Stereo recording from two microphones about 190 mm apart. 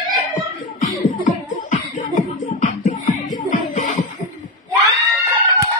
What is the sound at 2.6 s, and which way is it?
Music, 40° left (ahead or behind).